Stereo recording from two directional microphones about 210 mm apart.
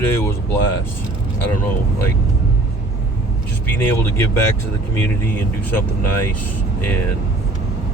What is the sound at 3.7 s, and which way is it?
Speech, 10° left (ahead or behind).